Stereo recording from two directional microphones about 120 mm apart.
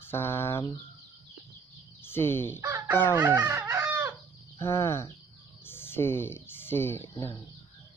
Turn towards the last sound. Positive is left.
turn(degrees=30)  # may be behind; listen again after turning